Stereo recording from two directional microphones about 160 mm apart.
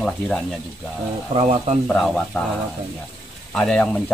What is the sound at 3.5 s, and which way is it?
Speech, 5° left (ahead or behind).